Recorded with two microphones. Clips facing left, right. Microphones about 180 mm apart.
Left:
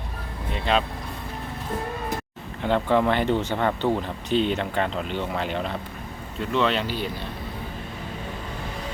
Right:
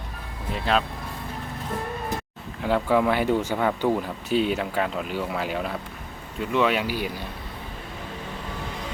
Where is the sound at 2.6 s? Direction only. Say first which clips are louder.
Even; 5° right (ahead or behind).